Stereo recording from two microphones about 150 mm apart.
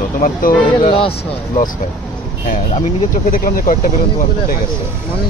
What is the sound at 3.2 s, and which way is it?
Speech, 70° left (ahead or behind).